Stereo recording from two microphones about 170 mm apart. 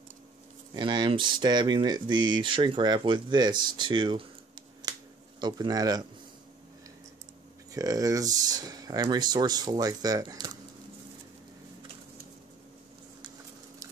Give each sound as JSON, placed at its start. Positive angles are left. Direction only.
{"t": 0.7, "sound": "speech", "side_deg": -25}
{"t": 5.4, "sound": "speech", "side_deg": -25}
{"t": 7.7, "sound": "speech", "side_deg": -20}